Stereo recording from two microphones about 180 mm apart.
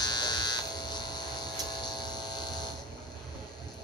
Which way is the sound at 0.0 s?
25° left (ahead or behind).